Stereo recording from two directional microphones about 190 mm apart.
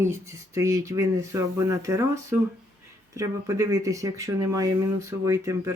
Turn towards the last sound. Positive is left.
turn(degrees=-15)  # may be behind; listen again after turning